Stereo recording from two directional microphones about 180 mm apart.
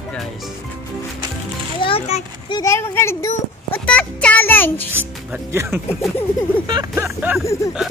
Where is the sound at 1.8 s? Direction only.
30° left (ahead or behind).